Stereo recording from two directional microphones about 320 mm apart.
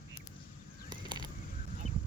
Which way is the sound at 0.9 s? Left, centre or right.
Centre.